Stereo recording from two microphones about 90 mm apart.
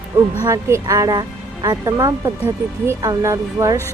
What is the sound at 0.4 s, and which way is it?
Speech, 35° right (ahead or behind).